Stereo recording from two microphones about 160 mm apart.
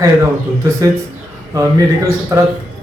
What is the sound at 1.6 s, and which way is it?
Speech, 20° right (ahead or behind).